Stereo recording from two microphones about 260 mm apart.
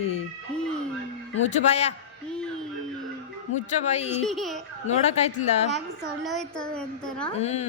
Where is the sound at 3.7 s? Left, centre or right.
Left.